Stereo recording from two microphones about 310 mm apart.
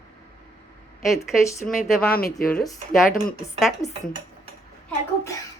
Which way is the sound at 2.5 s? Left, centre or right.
Centre.